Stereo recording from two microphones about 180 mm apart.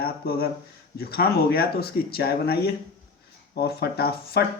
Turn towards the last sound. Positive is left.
turn(degrees=60)  # may be behind; listen again after turning